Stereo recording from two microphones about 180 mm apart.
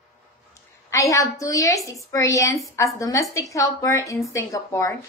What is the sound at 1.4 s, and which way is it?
A woman's voice, 20° left (ahead or behind).